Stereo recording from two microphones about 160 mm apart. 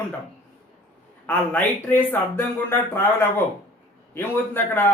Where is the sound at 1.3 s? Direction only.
10° left (ahead or behind).